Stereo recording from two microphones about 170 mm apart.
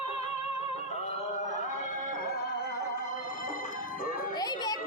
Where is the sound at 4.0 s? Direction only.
55° left (ahead or behind).